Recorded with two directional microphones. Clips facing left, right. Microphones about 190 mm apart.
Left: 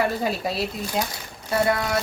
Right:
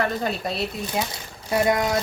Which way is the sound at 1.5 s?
20° right (ahead or behind).